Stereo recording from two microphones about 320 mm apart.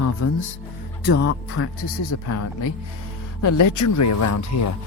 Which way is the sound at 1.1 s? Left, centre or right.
Left.